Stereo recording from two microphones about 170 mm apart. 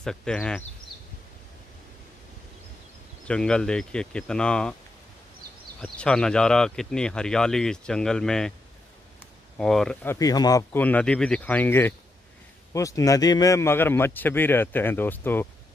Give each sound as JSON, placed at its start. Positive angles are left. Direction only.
{"t": 0.0, "sound": "speech", "side_deg": 5}
{"t": 3.3, "sound": "speech", "side_deg": 5}
{"t": 5.8, "sound": "speech", "side_deg": 5}
{"t": 9.6, "sound": "speech", "side_deg": 5}
{"t": 10.0, "sound": "speech", "side_deg": 20}
{"t": 10.8, "sound": "a man's voice", "side_deg": 10}